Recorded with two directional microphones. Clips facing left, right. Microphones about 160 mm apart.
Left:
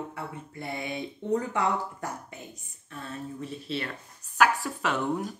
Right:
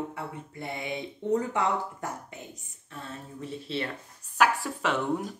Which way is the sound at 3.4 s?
25° right (ahead or behind).